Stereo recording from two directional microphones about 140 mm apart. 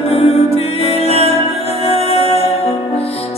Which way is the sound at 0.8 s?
45° left (ahead or behind).